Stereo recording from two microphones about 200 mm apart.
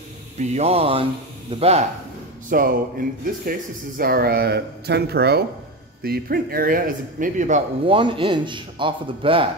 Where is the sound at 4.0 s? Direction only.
50° right (ahead or behind).